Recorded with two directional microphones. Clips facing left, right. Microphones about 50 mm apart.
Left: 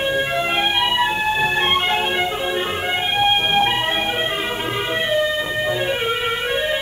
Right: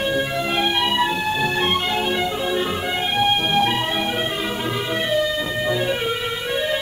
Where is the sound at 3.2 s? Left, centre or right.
Left.